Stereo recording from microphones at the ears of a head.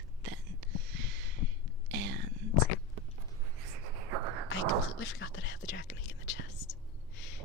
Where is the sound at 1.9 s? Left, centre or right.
Right.